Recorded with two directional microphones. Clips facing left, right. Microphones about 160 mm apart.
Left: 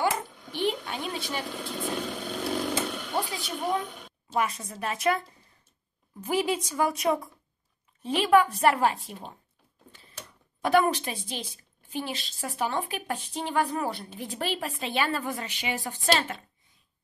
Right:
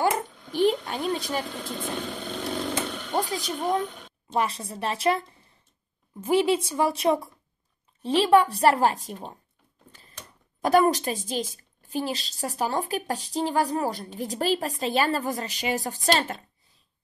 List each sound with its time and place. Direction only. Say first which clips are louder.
0.5 s a sound: right 6 dB; 40° right (ahead or behind)
1.6 s vehicle: even; centre (ahead or behind)
3.2 s a woman's voice: right 4 dB; 40° right (ahead or behind)
4.4 s a woman's voice: right 2 dB; 30° right (ahead or behind)
6.2 s a woman's voice: right 5 dB; 25° right (ahead or behind)
10.6 s a woman's voice: right 3 dB; 40° right (ahead or behind)